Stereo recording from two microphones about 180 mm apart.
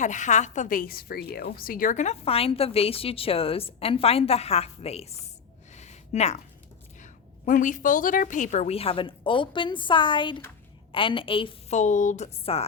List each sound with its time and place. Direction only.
0.0 s a woman's voice: 40° left (ahead or behind)
5.7 s a sound: 40° left (ahead or behind)
7.0 s a woman's voice: 45° left (ahead or behind); by 11.8 s 30° left (ahead or behind)
11.8 s a woman's voice: 45° left (ahead or behind)